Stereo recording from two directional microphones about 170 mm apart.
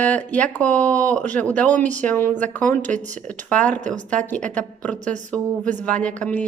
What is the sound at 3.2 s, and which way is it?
Speech, 10° left (ahead or behind).